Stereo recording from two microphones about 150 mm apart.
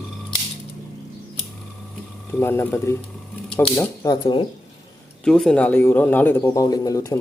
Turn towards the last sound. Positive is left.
turn(degrees=25)  # may be behind; listen again after turning